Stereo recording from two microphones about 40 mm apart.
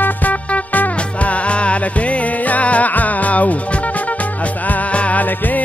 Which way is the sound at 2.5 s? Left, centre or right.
Left.